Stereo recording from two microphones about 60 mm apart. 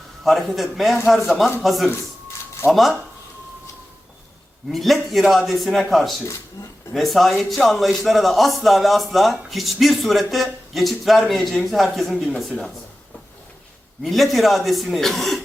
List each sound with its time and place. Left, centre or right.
0.3 s a man's voice: centre
4.7 s a man's voice: centre
6.6 s speech: left
6.9 s a man's voice: centre
14.0 s a man's voice: centre